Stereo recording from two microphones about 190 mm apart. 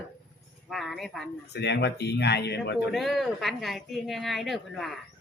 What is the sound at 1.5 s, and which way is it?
Speech, 65° left (ahead or behind).